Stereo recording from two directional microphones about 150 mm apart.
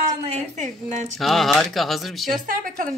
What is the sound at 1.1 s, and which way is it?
Speech, centre (ahead or behind).